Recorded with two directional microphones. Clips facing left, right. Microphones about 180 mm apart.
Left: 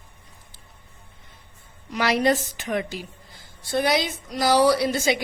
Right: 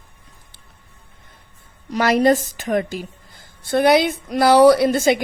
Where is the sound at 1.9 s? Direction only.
45° right (ahead or behind).